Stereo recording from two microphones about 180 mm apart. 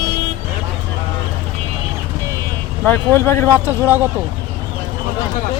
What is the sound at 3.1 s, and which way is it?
Speech, 15° left (ahead or behind).